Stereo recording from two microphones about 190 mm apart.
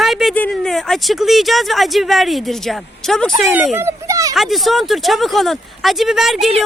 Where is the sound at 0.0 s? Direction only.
Centre (ahead or behind).